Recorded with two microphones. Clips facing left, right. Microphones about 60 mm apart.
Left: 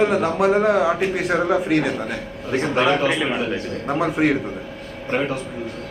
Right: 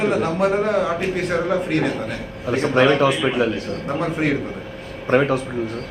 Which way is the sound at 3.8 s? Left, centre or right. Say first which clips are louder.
Left 3 dB; centre.